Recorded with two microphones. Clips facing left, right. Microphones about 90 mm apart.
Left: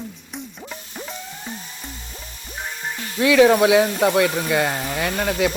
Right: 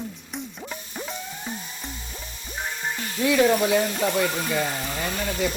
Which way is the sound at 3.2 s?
85° left.